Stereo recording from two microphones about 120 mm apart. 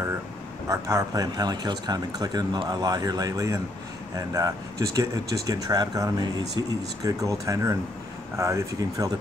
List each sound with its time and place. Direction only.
0.7 s speech: 25° right (ahead or behind)